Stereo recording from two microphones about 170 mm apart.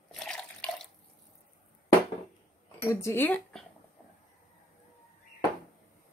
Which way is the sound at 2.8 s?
15° left (ahead or behind).